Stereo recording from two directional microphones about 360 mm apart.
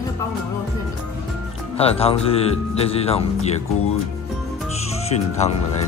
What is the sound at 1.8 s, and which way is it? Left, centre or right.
Speech, centre.